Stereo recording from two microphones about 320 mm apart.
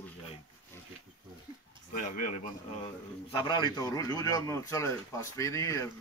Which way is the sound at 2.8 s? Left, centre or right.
Centre.